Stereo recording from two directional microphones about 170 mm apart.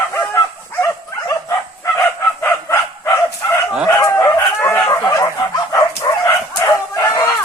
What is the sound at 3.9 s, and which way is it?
Chicken, 15° left (ahead or behind).